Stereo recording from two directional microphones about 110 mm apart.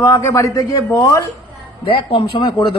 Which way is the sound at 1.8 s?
55° left (ahead or behind).